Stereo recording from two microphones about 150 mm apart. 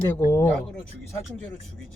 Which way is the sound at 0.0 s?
20° left (ahead or behind).